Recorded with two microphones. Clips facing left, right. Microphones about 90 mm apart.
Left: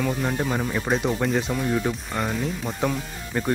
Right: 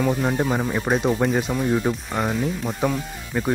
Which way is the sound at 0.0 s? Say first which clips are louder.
Right 4 dB; 10° right (ahead or behind).